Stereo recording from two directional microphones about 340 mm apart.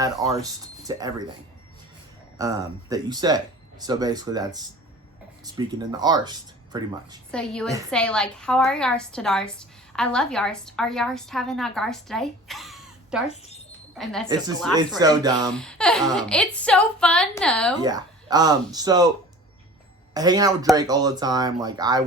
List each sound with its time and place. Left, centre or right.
0.2 s a woman's voice: centre
0.9 s speech: centre
2.4 s speech: centre
5.5 s speech: centre
7.3 s a woman's voice: centre
13.3 s speech: centre
14.0 s a woman's voice: centre
14.3 s speech: centre
15.5 s a woman's voice: centre
17.7 s speech: centre
20.1 s speech: centre